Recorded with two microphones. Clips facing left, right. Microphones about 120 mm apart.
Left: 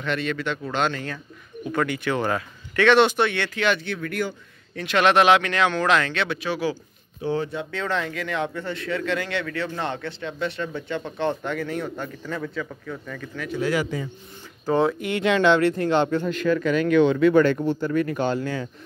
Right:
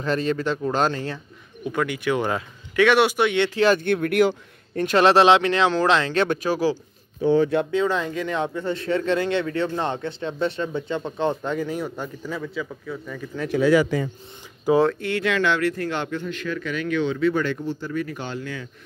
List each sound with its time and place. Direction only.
0.0 s speech: 35° right (ahead or behind)
1.6 s speech: 10° right (ahead or behind)
3.4 s speech: 35° right (ahead or behind)
3.8 s speech: 60° right (ahead or behind)
4.7 s speech: 40° right (ahead or behind)
6.1 s speech: 45° right (ahead or behind)
7.7 s speech: 15° right (ahead or behind)
13.5 s speech: 80° right
14.9 s speech: 15° left (ahead or behind)
16.2 s speech: 45° left (ahead or behind)